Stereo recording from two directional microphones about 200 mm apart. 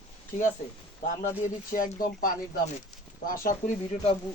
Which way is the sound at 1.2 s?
40° left (ahead or behind).